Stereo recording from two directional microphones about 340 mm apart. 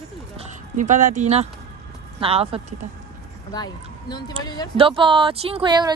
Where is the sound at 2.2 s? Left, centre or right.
Centre.